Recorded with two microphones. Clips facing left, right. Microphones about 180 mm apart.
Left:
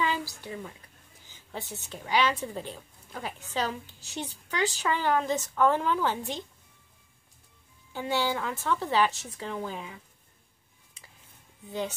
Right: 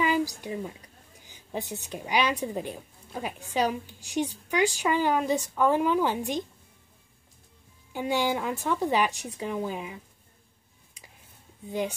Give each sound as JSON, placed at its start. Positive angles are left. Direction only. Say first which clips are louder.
{"t": 0.0, "sound": "a sound", "louder": "right 5 dB", "side_deg": -15}
{"t": 1.2, "sound": "a woman's voice", "louder": "right 5 dB", "side_deg": -15}
{"t": 7.9, "sound": "a woman's voice", "louder": "right 2 dB", "side_deg": -15}